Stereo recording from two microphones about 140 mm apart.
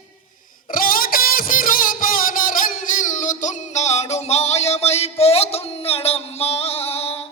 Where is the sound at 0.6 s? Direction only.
85° left; by 7.2 s 45° left (ahead or behind).